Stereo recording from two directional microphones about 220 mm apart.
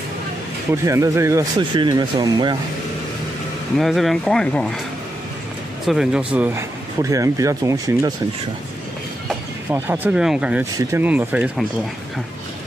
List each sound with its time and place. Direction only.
0.8 s speech: 15° right (ahead or behind)
3.7 s speech: centre (ahead or behind)
5.9 s speech: 5° right (ahead or behind)
9.7 s speech: 10° right (ahead or behind)